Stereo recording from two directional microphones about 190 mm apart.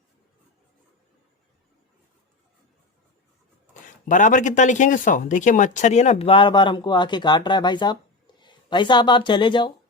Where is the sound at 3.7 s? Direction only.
40° left (ahead or behind).